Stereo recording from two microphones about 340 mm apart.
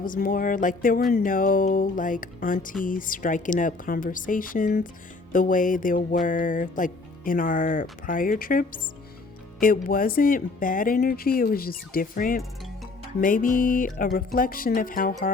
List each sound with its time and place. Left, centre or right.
0.0 s speech: left